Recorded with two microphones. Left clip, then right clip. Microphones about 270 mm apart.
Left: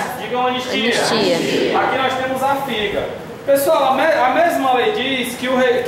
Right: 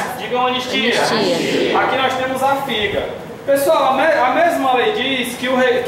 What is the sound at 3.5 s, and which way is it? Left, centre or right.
A man's voice, centre.